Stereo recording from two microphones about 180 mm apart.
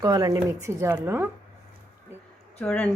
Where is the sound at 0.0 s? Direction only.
20° right (ahead or behind).